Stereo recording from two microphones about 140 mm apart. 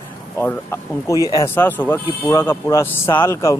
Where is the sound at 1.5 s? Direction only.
15° left (ahead or behind).